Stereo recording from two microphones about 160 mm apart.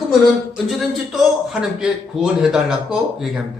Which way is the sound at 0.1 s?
Centre (ahead or behind).